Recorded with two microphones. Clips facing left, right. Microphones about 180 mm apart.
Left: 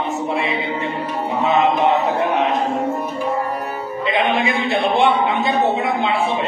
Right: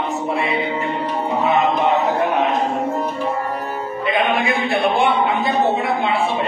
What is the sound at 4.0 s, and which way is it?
A man's voice, 25° left (ahead or behind).